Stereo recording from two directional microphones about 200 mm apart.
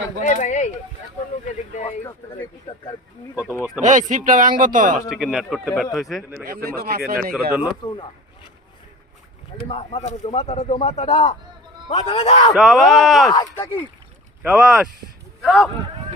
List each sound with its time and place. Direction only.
0.2 s speech: 40° left (ahead or behind)
2.0 s speech: 20° left (ahead or behind)
3.8 s speech: 40° right (ahead or behind)
5.0 s a man's voice: centre (ahead or behind)
6.4 s speech: 50° right (ahead or behind)
9.7 s speech: 35° left (ahead or behind)
12.5 s a man's voice: centre (ahead or behind)
13.3 s speech: 15° left (ahead or behind)
14.4 s a man's voice: 5° right (ahead or behind)